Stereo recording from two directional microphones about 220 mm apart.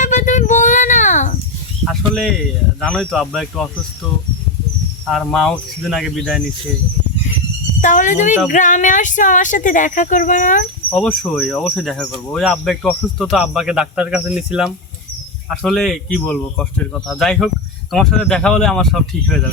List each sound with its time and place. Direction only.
0.0 s a sound: 35° left (ahead or behind)
1.8 s a sound: centre (ahead or behind)
2.8 s speech: centre (ahead or behind)
5.0 s speech: centre (ahead or behind)
7.8 s speech: 35° left (ahead or behind)
10.8 s speech: 5° left (ahead or behind)